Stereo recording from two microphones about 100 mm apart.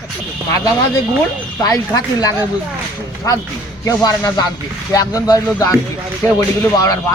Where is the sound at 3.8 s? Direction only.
40° left (ahead or behind).